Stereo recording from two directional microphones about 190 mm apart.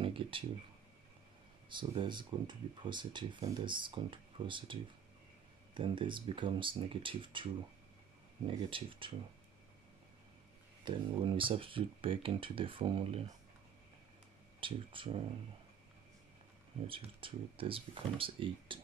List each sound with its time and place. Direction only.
0.0 s speech: 25° right (ahead or behind)
1.7 s speech: 25° right (ahead or behind)
5.8 s speech: 25° right (ahead or behind)
8.5 s speech: 25° right (ahead or behind)
10.8 s speech: 25° right (ahead or behind)
14.6 s speech: 25° right (ahead or behind)
16.8 s speech: 30° right (ahead or behind)